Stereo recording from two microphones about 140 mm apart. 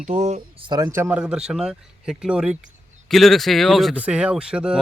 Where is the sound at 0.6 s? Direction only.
30° right (ahead or behind).